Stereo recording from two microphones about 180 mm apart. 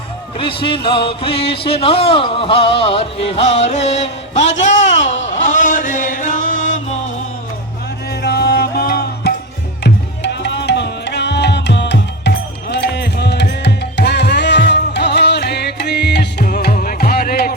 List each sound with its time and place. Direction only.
0.3 s speech: 30° left (ahead or behind)
3.8 s music: 35° left (ahead or behind)
8.2 s music: 65° left (ahead or behind)
9.8 s music: 70° left (ahead or behind)